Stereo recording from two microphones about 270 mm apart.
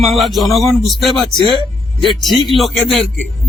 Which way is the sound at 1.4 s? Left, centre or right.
Centre.